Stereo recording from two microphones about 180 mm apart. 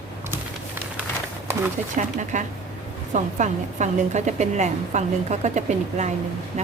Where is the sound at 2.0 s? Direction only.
40° right (ahead or behind).